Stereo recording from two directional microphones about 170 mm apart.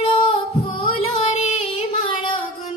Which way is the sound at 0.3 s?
30° left (ahead or behind).